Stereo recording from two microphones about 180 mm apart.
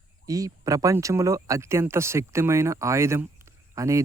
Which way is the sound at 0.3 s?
20° right (ahead or behind).